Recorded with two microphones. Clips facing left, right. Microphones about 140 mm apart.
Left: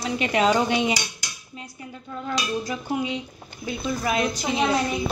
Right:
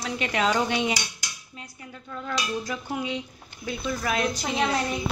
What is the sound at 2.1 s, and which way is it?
Speech, 15° left (ahead or behind).